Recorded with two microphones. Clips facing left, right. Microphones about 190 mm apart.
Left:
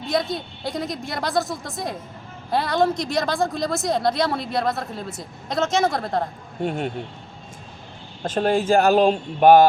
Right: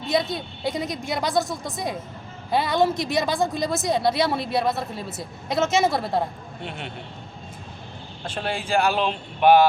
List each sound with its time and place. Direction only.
0.1 s speech: centre (ahead or behind)
6.6 s speech: 45° left (ahead or behind)
8.2 s speech: 45° left (ahead or behind)